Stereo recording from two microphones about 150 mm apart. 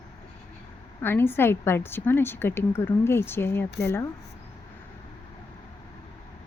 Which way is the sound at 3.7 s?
90° left.